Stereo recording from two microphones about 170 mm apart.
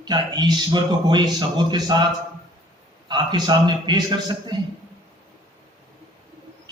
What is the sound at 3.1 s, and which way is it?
A man's voice, 25° right (ahead or behind).